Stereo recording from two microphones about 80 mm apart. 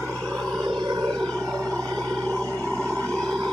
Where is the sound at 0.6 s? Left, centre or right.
Right.